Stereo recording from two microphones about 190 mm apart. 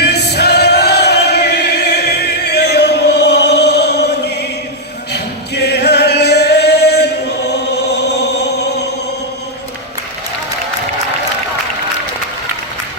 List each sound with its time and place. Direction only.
0.0 s choir: 60° left (ahead or behind)
5.1 s singing: 60° left (ahead or behind)
7.5 s chant: 60° left (ahead or behind)